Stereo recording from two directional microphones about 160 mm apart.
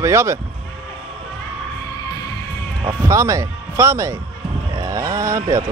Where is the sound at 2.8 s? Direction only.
20° right (ahead or behind).